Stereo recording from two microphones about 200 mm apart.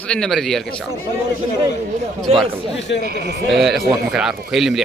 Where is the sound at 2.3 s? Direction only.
30° right (ahead or behind).